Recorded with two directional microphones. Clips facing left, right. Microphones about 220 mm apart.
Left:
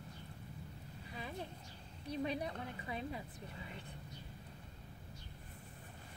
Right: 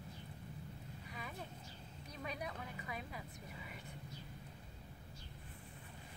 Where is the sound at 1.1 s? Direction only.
30° left (ahead or behind).